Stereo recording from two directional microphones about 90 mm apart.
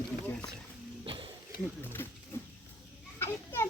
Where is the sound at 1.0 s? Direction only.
70° right (ahead or behind).